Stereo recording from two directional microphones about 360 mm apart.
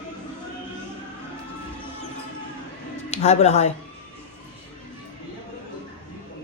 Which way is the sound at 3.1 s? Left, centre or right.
Centre.